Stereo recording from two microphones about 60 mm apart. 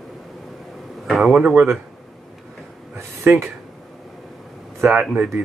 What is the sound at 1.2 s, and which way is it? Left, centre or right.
Speech, centre.